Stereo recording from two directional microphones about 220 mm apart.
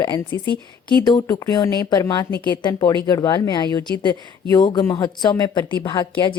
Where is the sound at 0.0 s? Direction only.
20° left (ahead or behind).